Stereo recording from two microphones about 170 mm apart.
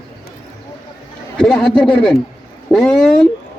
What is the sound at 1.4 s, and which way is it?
A man's voice, 5° left (ahead or behind).